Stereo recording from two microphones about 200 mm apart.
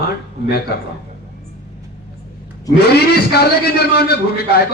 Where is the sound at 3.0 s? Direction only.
50° left (ahead or behind).